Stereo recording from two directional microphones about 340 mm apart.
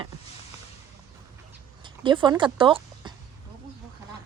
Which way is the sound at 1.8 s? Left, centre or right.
Centre.